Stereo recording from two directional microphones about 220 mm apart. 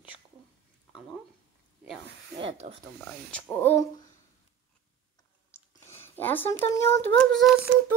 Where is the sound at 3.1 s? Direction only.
5° left (ahead or behind).